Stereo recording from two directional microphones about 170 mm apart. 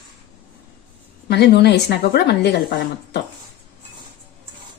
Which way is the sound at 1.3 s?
80° left.